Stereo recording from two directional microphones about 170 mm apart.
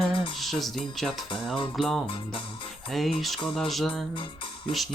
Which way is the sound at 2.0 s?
30° left (ahead or behind).